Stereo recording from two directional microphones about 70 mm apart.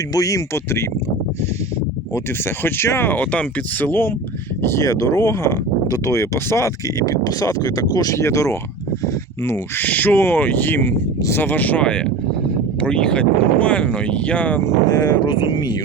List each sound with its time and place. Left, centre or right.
0.1 s speech: left
0.5 s speech: left
2.6 s speech: left
3.1 s speech: left
4.6 s speech: left
7.0 s speech: left
8.2 s speech: left
9.7 s speech: left
14.9 s speech: left